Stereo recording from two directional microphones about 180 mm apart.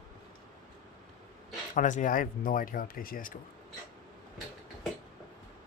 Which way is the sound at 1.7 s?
45° left (ahead or behind).